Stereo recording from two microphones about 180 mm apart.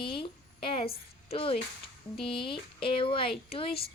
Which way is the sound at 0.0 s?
30° left (ahead or behind).